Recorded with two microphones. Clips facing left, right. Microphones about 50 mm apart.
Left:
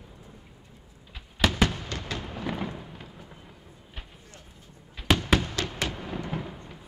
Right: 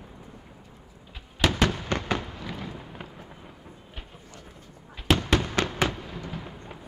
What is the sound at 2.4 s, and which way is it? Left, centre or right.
Fireworks, left.